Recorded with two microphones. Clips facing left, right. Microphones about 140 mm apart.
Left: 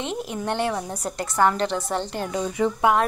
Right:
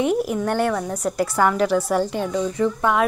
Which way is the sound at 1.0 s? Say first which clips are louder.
Right 1 dB; 5° right (ahead or behind).